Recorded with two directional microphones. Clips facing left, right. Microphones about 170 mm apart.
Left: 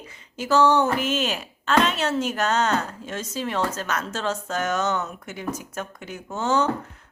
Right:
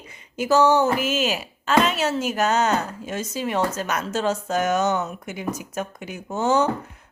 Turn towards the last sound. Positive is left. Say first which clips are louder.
# right 3 dB
turn(degrees=-10)  # may be behind; listen again after turning